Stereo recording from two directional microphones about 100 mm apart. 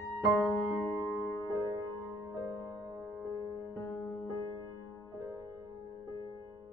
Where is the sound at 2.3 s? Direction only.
35° right (ahead or behind).